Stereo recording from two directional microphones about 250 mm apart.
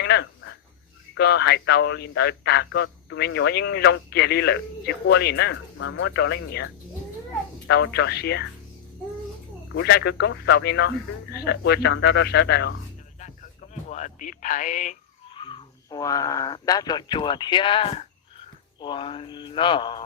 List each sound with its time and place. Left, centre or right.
0.0 s a sound: left
1.1 s speech: left
7.7 s speech: left
9.7 s speech: left
13.1 s speech: left